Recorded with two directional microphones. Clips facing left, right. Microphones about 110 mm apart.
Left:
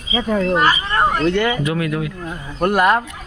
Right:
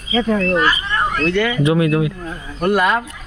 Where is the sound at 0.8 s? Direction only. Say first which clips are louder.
Left 2 dB; 30° left (ahead or behind).